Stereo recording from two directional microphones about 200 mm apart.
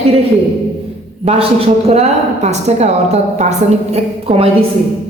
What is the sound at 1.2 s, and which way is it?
A woman's voice, 30° right (ahead or behind).